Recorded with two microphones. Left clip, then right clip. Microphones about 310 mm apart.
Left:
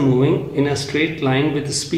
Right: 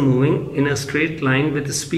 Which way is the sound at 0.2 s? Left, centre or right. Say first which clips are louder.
Left 1 dB; centre.